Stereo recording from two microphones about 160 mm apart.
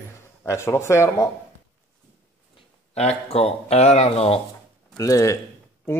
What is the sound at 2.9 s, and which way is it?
Speech, 40° left (ahead or behind).